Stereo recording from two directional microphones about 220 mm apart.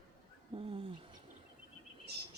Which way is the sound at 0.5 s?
25° right (ahead or behind).